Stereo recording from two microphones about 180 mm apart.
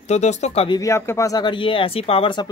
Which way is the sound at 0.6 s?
20° left (ahead or behind).